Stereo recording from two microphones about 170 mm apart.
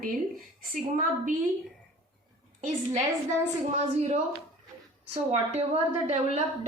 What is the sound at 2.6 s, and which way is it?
Speech, 50° right (ahead or behind).